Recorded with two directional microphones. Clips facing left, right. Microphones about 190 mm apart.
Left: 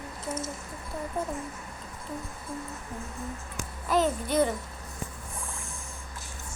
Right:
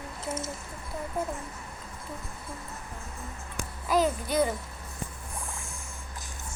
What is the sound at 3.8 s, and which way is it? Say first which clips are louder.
Speech: even; centre (ahead or behind).